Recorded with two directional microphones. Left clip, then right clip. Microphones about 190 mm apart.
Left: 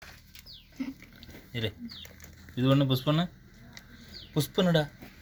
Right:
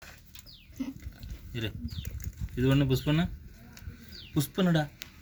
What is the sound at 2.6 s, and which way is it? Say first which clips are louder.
Speech: left 1 dB; 25° left (ahead or behind).